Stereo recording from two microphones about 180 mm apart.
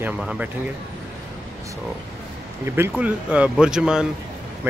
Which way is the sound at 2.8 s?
10° right (ahead or behind).